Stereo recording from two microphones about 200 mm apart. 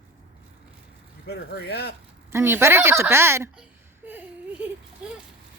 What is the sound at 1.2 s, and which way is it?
Speech, 55° left (ahead or behind).